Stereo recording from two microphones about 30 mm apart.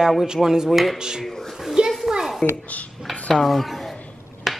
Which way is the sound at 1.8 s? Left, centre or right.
Right.